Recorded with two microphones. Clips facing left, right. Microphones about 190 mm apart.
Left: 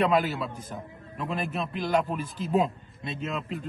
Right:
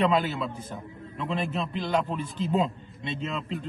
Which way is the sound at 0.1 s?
Centre (ahead or behind).